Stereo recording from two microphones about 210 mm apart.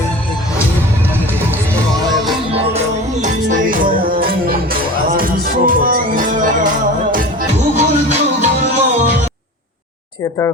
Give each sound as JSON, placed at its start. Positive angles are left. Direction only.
{"t": 2.5, "sound": "music", "side_deg": -30}
{"t": 7.8, "sound": "music", "side_deg": -30}